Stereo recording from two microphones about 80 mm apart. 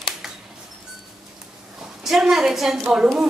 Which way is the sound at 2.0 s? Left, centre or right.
Centre.